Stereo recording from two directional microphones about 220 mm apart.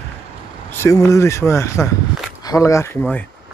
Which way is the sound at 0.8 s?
15° left (ahead or behind).